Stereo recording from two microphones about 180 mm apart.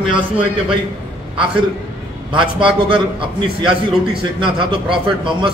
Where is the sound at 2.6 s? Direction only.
30° right (ahead or behind).